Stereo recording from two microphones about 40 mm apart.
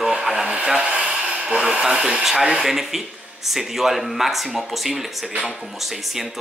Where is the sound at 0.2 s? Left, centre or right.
Centre.